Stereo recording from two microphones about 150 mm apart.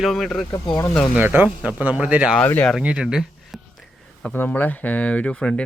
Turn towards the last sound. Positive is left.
turn(degrees=5)  # may be behind; listen again after turning